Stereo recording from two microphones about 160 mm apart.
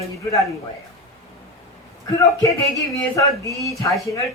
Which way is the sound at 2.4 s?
20° left (ahead or behind).